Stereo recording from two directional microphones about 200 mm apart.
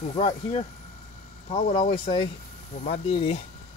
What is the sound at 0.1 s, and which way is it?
Speech, 30° left (ahead or behind).